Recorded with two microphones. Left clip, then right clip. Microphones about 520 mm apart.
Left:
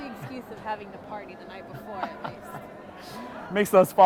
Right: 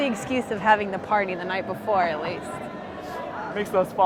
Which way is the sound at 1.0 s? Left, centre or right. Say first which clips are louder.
Right 17 dB; right.